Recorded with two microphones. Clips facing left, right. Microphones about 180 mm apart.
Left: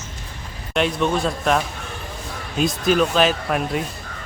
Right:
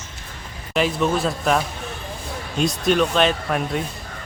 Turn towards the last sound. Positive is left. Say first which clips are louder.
# left 1 dB
turn(degrees=0)  # may be behind; listen again after turning